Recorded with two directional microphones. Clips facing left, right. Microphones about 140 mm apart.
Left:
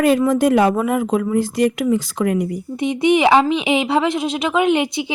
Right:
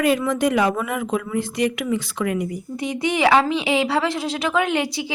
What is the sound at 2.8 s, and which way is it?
A woman's voice, 20° left (ahead or behind).